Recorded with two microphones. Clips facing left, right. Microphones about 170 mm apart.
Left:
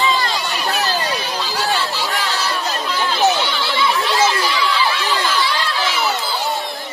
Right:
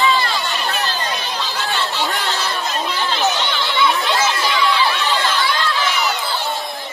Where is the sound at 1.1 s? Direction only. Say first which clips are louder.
Left 2 dB; 5° left (ahead or behind).